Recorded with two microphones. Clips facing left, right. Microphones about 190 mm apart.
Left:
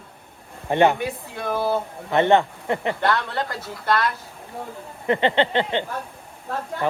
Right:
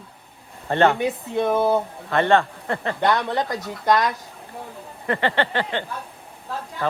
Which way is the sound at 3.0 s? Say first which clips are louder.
Right 2 dB; 15° right (ahead or behind).